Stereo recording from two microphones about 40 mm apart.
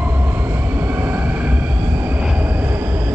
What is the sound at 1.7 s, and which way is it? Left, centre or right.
Vehicle, right.